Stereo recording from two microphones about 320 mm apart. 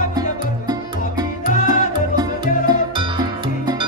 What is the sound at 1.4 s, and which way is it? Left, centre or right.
Music, left.